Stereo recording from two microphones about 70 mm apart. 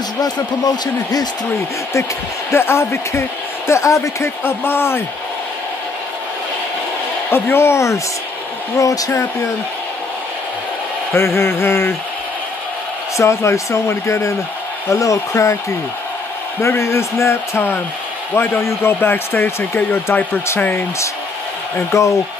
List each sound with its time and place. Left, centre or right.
0.2 s speech: left
2.5 s speech: left
4.5 s speech: left
7.2 s speech: left
8.7 s speech: left
11.1 s speech: left
13.2 s speech: left
16.6 s speech: left
21.9 s speech: left